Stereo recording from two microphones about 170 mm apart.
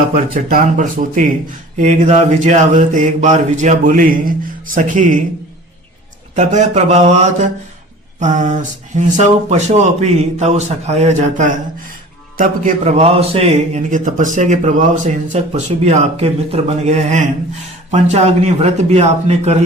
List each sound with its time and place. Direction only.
0.1 s mantra: 55° right (ahead or behind)
6.3 s mantra: 45° right (ahead or behind)
12.4 s a man's voice: 45° right (ahead or behind)